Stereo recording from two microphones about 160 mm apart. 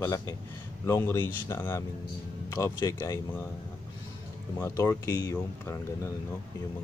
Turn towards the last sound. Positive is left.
turn(degrees=15)  # may be behind; listen again after turning